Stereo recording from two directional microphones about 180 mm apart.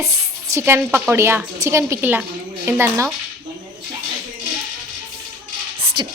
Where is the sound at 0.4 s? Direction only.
15° right (ahead or behind).